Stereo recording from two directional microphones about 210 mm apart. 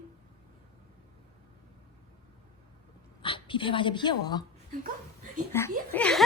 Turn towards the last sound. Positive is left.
turn(degrees=5)  # may be behind; listen again after turning